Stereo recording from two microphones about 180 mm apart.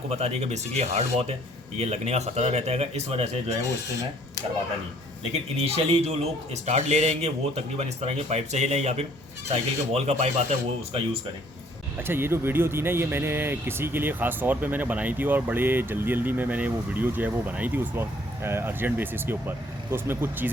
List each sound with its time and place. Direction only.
0.1 s a man's voice: 35° right (ahead or behind)
5.3 s a man's voice: 35° right (ahead or behind)
11.9 s speech: 10° right (ahead or behind)